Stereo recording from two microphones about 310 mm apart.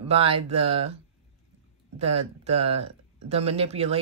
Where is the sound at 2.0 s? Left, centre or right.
Centre.